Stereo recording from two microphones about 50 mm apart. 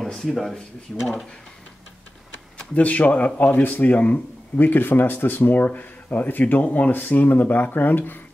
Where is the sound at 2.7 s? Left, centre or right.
Left.